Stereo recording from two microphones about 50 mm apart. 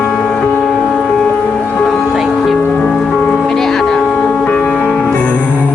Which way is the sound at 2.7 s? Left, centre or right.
Centre.